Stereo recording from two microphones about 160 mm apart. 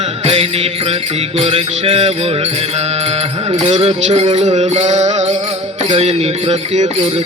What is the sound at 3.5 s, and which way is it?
Music, 40° right (ahead or behind).